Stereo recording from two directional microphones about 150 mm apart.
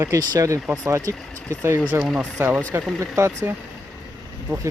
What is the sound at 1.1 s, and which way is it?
Speech, 5° left (ahead or behind).